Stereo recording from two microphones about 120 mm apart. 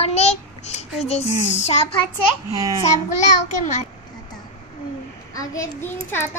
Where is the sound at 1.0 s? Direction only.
65° left (ahead or behind).